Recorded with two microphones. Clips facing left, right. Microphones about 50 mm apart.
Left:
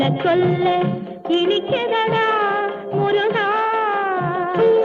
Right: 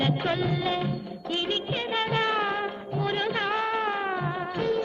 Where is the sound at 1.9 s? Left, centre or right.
Left.